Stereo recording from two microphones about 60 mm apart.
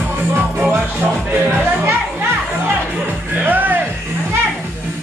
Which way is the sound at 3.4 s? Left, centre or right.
Right.